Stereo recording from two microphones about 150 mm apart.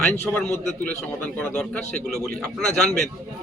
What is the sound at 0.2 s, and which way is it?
A man's voice, 15° left (ahead or behind).